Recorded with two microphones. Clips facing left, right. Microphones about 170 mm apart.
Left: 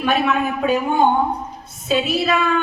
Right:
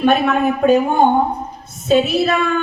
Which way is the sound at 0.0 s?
50° right (ahead or behind).